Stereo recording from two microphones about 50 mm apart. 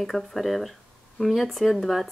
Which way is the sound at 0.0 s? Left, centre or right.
Centre.